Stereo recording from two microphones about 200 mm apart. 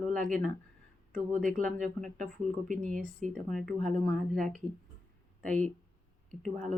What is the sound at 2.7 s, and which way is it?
Speech, 40° right (ahead or behind).